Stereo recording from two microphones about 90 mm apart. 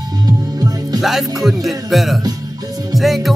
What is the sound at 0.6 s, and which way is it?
Music, 45° right (ahead or behind).